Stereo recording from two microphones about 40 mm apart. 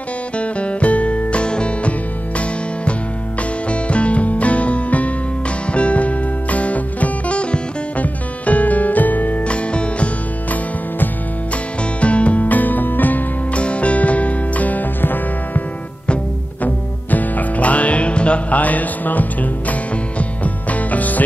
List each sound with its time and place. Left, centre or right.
0.4 s music: left
9.5 s music: left
12.0 s music: left
13.6 s music: left
16.6 s music: left